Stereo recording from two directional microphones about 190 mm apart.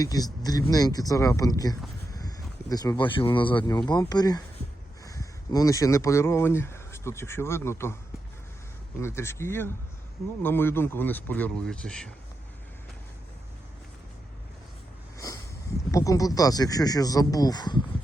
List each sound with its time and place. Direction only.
0.0 s speech: 20° left (ahead or behind)
9.0 s speech: 15° left (ahead or behind)
15.9 s speech: 15° left (ahead or behind)